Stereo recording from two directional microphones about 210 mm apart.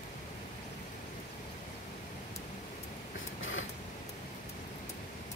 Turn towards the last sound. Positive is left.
turn(degrees=65)  # may be behind; listen again after turning